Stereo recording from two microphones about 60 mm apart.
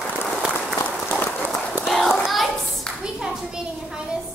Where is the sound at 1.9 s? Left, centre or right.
Centre.